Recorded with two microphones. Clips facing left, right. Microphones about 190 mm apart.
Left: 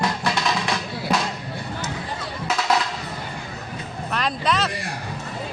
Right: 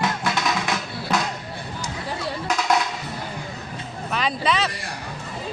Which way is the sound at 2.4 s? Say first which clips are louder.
Even; centre (ahead or behind).